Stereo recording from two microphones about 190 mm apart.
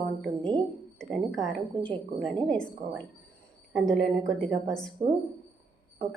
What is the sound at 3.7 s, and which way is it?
Speech, 5° left (ahead or behind).